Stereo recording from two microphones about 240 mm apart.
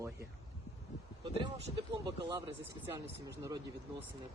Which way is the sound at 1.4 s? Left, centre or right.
Centre.